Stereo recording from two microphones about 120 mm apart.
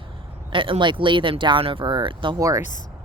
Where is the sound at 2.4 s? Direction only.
30° right (ahead or behind).